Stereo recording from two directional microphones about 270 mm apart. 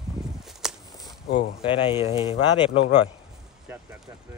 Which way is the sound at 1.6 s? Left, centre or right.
Centre.